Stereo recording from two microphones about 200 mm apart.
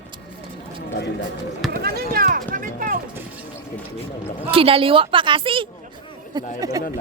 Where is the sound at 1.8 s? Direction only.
50° right (ahead or behind).